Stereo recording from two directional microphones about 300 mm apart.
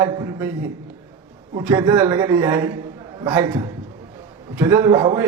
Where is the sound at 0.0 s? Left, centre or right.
Centre.